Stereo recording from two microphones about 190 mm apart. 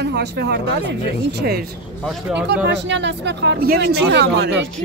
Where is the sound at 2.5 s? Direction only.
65° right (ahead or behind).